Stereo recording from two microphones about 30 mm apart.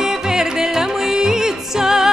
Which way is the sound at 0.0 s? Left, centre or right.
Centre.